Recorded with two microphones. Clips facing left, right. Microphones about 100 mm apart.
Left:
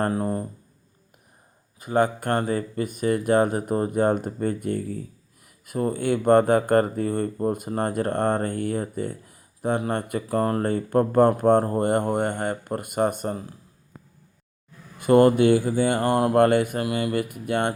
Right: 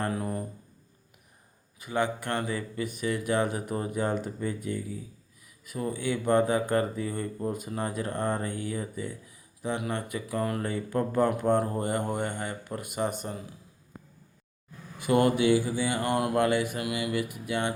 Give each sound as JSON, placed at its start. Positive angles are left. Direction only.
{"t": 0.1, "sound": "speech", "side_deg": 35}
{"t": 1.8, "sound": "speech", "side_deg": 45}
{"t": 14.9, "sound": "speech", "side_deg": 50}